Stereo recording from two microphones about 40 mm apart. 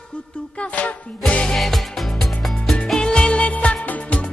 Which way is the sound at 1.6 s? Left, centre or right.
Centre.